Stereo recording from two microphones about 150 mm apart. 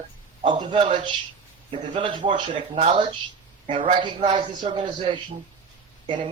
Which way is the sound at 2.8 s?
45° right (ahead or behind).